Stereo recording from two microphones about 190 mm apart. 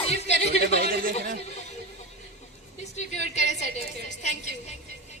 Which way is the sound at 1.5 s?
35° left (ahead or behind).